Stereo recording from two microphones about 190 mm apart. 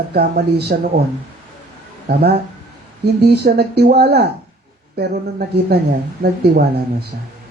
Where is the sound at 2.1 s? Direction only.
60° right (ahead or behind).